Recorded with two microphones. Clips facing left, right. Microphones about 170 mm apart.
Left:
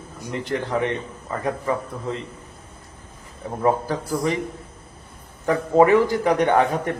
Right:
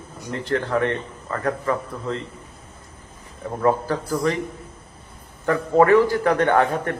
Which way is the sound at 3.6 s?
15° left (ahead or behind).